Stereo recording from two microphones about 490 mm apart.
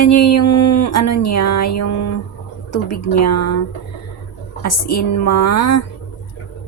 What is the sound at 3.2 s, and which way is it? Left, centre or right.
Speech, left.